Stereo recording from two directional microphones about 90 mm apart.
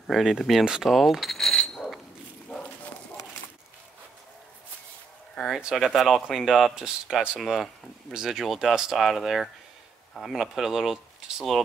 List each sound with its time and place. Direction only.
0.0 s speech: centre (ahead or behind)
5.5 s speech: 5° right (ahead or behind)